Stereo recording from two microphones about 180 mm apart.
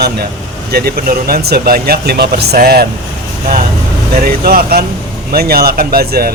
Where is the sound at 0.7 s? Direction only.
60° right (ahead or behind).